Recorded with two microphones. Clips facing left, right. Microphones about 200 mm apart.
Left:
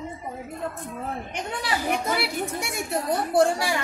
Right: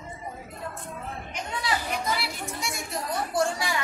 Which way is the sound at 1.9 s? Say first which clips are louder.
Left 4 dB; 55° left (ahead or behind).